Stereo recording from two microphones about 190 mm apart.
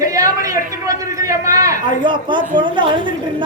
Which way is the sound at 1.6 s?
20° right (ahead or behind).